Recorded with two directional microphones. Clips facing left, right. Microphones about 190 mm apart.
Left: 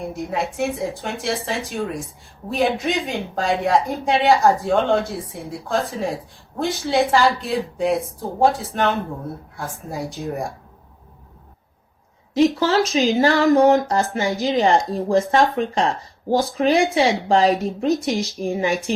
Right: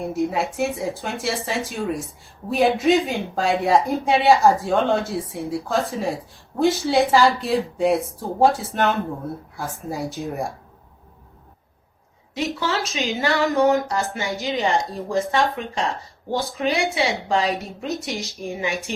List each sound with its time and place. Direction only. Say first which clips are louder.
0.2 s speech: right 2 dB; centre (ahead or behind)
12.5 s speech: left 7 dB; 35° left (ahead or behind)